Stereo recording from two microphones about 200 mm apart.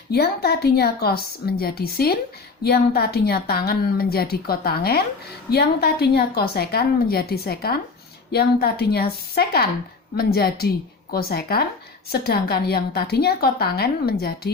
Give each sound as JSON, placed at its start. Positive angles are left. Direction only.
{"t": 0.1, "sound": "a woman's voice", "side_deg": 50}